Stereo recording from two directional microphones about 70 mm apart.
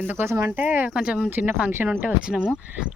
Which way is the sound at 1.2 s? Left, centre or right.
Right.